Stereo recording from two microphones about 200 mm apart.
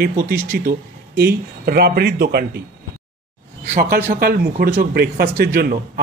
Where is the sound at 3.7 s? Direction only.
50° right (ahead or behind).